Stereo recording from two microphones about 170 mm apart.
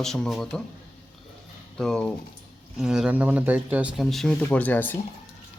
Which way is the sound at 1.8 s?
5° left (ahead or behind).